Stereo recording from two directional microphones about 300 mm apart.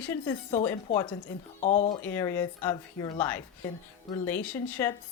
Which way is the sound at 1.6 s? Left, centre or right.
Left.